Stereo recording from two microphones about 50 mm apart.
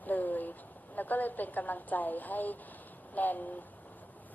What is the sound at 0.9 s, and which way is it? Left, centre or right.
A woman's voice, left.